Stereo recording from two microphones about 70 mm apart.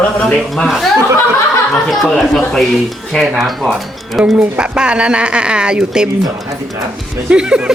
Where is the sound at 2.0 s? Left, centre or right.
Centre.